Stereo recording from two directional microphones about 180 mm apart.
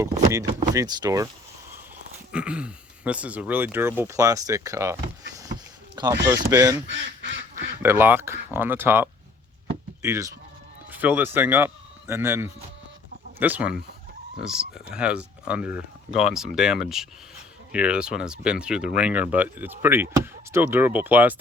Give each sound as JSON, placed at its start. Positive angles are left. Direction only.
{"t": 0.0, "sound": "speech", "side_deg": -20}
{"t": 2.3, "sound": "speech", "side_deg": -5}
{"t": 6.2, "sound": "speech", "side_deg": -20}
{"t": 6.8, "sound": "speech", "side_deg": -90}
{"t": 7.5, "sound": "speech", "side_deg": -10}